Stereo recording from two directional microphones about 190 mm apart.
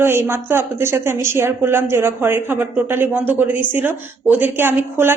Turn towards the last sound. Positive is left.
turn(degrees=-10)  # may be behind; listen again after turning